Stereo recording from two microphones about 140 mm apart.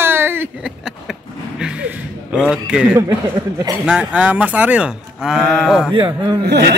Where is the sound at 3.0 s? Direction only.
25° right (ahead or behind).